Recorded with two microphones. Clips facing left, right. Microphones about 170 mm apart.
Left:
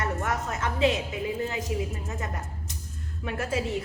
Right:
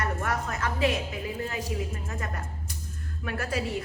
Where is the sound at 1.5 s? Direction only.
20° left (ahead or behind).